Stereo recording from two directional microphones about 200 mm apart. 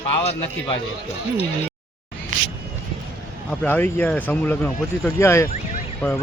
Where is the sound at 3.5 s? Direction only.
10° left (ahead or behind).